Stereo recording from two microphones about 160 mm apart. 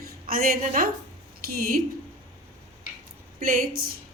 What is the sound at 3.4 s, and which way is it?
Speech, 60° right (ahead or behind).